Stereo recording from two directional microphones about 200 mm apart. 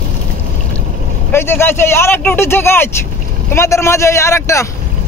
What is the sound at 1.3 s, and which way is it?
Speech, 10° left (ahead or behind).